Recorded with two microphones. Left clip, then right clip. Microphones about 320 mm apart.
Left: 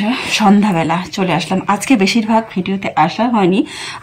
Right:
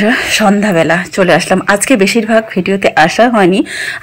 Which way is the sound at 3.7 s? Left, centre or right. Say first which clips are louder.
Right 8 dB; left.